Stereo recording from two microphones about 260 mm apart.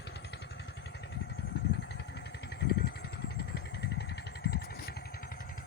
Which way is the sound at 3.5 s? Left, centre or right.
Left.